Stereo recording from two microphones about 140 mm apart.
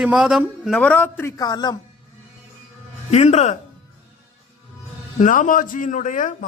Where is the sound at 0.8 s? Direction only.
10° left (ahead or behind).